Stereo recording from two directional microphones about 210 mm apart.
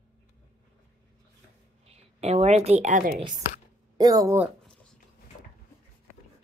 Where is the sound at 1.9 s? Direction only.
30° right (ahead or behind).